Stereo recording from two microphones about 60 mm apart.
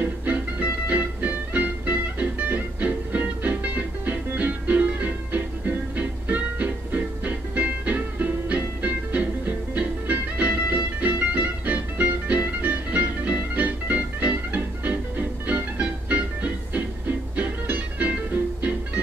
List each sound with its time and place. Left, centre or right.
0.0 s music: right